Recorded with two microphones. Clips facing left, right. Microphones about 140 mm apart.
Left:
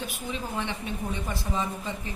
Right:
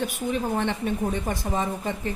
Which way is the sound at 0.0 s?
55° right (ahead or behind).